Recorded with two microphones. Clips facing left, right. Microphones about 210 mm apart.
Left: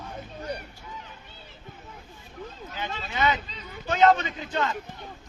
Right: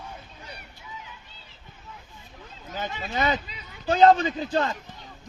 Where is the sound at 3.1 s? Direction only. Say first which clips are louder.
Even; 40° right (ahead or behind).